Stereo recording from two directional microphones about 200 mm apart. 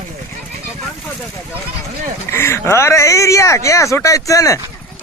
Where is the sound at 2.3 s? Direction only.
10° left (ahead or behind).